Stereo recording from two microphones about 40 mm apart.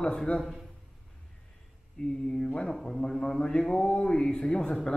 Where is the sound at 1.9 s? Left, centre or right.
Left.